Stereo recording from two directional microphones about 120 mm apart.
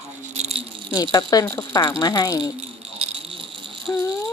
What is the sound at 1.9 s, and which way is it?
Speech, 30° left (ahead or behind).